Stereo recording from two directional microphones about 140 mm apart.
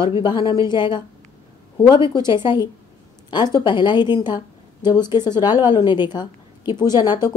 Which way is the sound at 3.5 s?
35° left (ahead or behind).